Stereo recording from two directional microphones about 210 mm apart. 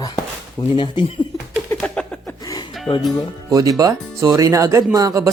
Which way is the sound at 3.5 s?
15° right (ahead or behind).